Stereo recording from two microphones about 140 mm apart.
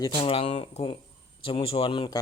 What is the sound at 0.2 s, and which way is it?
Speech, 40° left (ahead or behind).